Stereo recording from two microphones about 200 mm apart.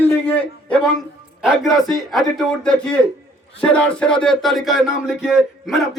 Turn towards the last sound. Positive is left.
turn(degrees=0)  # may be behind; listen again after turning